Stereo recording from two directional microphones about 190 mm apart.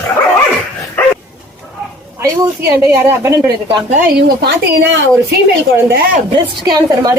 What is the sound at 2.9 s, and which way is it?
Speech, 15° right (ahead or behind).